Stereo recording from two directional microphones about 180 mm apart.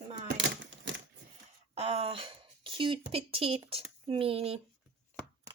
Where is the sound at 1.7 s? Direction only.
35° right (ahead or behind).